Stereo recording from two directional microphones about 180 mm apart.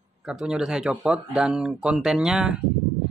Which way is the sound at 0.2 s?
5° right (ahead or behind).